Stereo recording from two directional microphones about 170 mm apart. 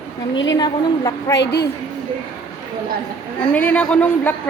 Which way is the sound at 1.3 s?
85° left.